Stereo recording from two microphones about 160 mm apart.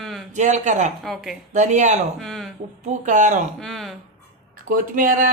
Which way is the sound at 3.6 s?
Centre (ahead or behind).